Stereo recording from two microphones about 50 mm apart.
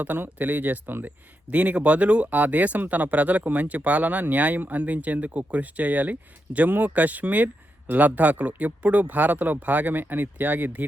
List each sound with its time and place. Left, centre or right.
0.0 s speech: right
1.5 s speech: right